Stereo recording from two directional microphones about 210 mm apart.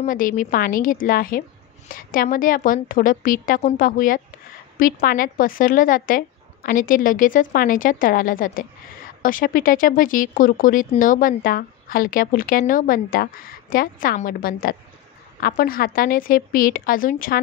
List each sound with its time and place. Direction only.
0.0 s speech: 40° left (ahead or behind)